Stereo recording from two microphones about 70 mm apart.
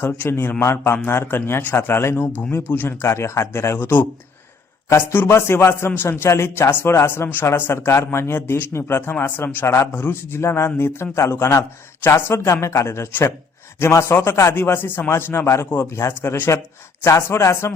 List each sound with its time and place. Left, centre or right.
0.3 s a man's voice: left
3.1 s a man's voice: left
15.1 s a man's voice: left